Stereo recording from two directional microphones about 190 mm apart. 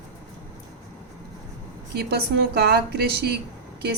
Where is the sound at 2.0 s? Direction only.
55° right (ahead or behind).